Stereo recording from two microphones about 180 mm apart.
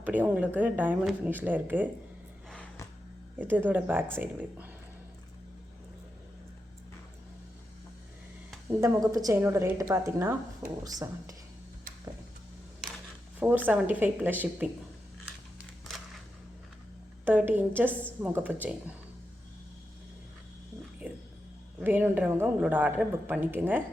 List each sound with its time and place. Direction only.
0.0 s a woman's voice: 10° right (ahead or behind)
2.5 s a sound: 5° left (ahead or behind)
3.3 s a woman's voice: 10° right (ahead or behind)
8.6 s a woman's voice: 15° right (ahead or behind)
13.7 s a woman's voice: 10° right (ahead or behind)
17.2 s a woman's voice: 10° right (ahead or behind)
21.0 s music: 10° right (ahead or behind)
21.8 s a woman's voice: 10° right (ahead or behind)